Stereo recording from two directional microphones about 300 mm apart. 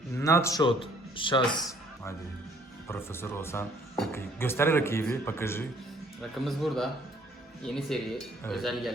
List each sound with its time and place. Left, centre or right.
0.2 s speech: centre
2.8 s a man's voice: centre